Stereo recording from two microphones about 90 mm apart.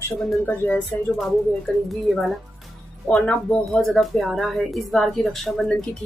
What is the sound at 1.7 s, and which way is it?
Speech, 10° left (ahead or behind).